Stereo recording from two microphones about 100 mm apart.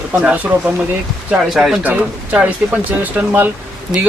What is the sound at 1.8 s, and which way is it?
Speech, 15° right (ahead or behind).